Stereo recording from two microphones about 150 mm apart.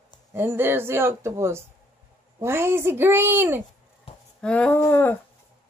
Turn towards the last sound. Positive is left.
turn(degrees=15)  # may be behind; listen again after turning